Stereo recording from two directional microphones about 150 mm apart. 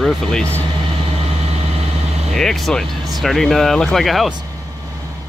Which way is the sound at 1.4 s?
45° right (ahead or behind).